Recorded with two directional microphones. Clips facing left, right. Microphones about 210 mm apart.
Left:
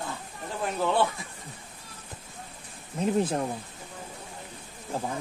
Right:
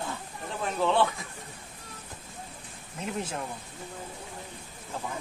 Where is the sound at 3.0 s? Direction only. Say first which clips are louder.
Left 8 dB; 35° left (ahead or behind).